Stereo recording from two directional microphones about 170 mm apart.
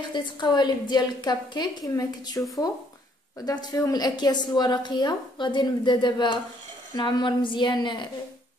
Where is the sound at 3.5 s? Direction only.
20° left (ahead or behind).